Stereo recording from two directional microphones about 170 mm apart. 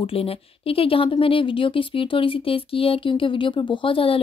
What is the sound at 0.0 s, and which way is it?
A woman's voice, 35° left (ahead or behind).